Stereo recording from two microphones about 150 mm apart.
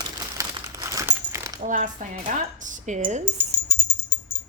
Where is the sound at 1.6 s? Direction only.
60° right (ahead or behind).